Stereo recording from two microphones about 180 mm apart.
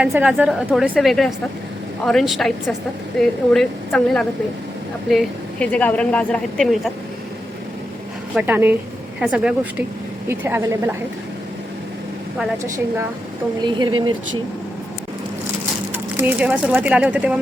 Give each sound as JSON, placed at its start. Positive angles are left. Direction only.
{"t": 0.0, "sound": "speech", "side_deg": -5}
{"t": 8.4, "sound": "speech", "side_deg": -10}
{"t": 12.6, "sound": "a woman's voice", "side_deg": -15}
{"t": 16.1, "sound": "speech", "side_deg": -10}